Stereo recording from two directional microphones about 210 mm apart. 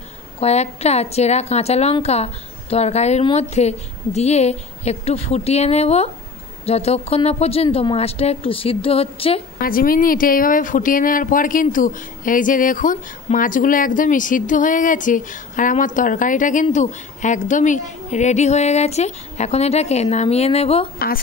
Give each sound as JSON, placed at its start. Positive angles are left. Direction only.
{"t": 0.4, "sound": "speech", "side_deg": 30}
{"t": 9.6, "sound": "speech", "side_deg": 45}